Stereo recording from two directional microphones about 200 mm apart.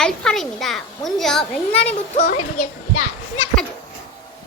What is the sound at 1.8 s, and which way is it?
Speech, 35° left (ahead or behind).